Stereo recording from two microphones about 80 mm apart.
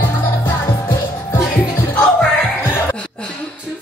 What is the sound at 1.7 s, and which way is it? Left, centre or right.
Music, left.